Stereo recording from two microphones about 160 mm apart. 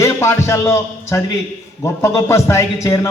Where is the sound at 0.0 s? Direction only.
15° left (ahead or behind).